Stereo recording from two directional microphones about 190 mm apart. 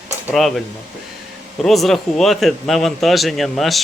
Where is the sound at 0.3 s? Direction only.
Centre (ahead or behind).